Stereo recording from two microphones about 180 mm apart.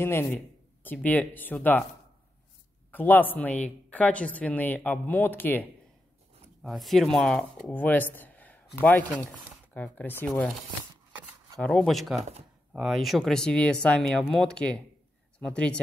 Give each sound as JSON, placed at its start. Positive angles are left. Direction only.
{"t": 0.0, "sound": "speech", "side_deg": 15}
{"t": 2.9, "sound": "speech", "side_deg": 10}
{"t": 6.6, "sound": "speech", "side_deg": 0}
{"t": 11.6, "sound": "speech", "side_deg": 0}
{"t": 12.2, "sound": "speech", "side_deg": -35}
{"t": 12.7, "sound": "speech", "side_deg": 0}